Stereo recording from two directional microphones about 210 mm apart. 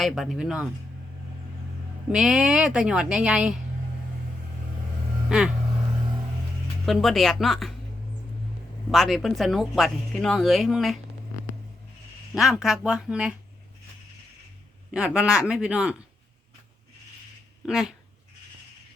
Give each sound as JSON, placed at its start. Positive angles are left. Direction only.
{"t": 0.0, "sound": "speech", "side_deg": 0}
{"t": 2.1, "sound": "speech", "side_deg": 0}
{"t": 5.3, "sound": "speech", "side_deg": -5}
{"t": 6.8, "sound": "speech", "side_deg": 0}
{"t": 8.9, "sound": "speech", "side_deg": 0}
{"t": 12.3, "sound": "speech", "side_deg": 0}
{"t": 14.9, "sound": "speech", "side_deg": -5}
{"t": 17.7, "sound": "speech", "side_deg": 0}